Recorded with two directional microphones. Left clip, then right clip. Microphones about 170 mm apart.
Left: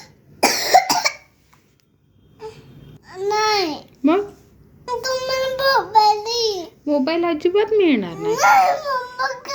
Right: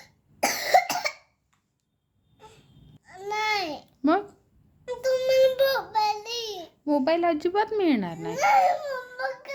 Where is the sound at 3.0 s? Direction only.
10° right (ahead or behind).